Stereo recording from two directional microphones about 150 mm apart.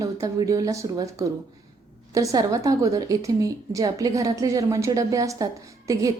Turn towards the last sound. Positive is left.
turn(degrees=-25)  # may be behind; listen again after turning